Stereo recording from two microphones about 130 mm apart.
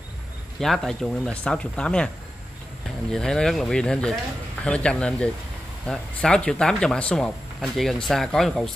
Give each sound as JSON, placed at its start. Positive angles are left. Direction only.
{"t": 0.6, "sound": "speech", "side_deg": 5}
{"t": 3.1, "sound": "speech", "side_deg": 5}